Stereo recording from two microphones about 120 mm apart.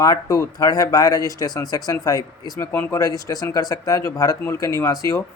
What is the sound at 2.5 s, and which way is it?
Speech, 20° left (ahead or behind).